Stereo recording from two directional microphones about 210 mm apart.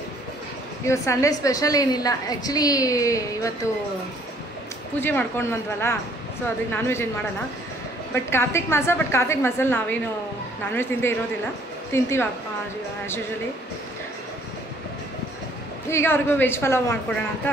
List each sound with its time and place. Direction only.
0.8 s a woman's voice: 15° left (ahead or behind)
5.0 s a woman's voice: 10° left (ahead or behind)
8.1 s a woman's voice: 10° left (ahead or behind)
15.9 s a woman's voice: 10° left (ahead or behind)